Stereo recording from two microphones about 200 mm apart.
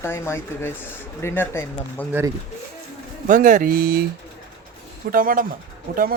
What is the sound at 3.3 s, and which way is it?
Speech, 40° right (ahead or behind).